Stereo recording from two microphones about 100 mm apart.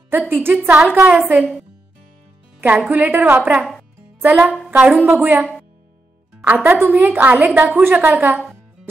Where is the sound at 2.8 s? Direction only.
15° right (ahead or behind).